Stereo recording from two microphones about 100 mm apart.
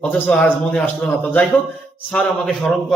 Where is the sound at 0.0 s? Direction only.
15° left (ahead or behind).